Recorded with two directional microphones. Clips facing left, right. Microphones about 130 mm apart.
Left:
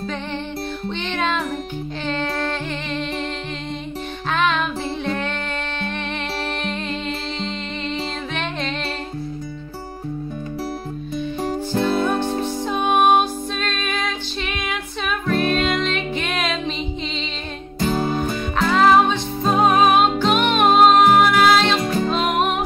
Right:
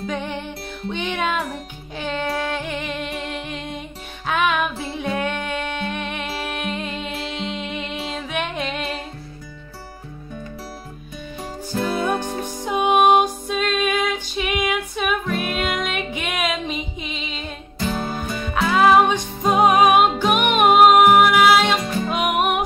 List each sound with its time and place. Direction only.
0.8 s music: 10° right (ahead or behind)
4.3 s music: 10° right (ahead or behind)
11.8 s music: 10° right (ahead or behind)
17.7 s music: 40° left (ahead or behind)
18.6 s music: 5° right (ahead or behind)